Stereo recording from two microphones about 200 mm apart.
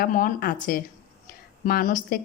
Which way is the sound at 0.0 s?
45° left (ahead or behind).